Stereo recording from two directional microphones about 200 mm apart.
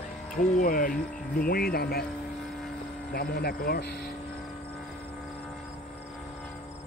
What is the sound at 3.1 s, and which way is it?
Speech, 50° left (ahead or behind).